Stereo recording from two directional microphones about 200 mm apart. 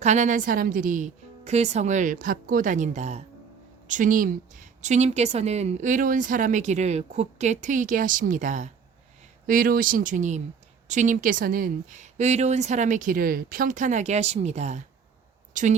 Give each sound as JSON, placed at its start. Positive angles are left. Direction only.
{"t": 0.0, "sound": "speech", "side_deg": -35}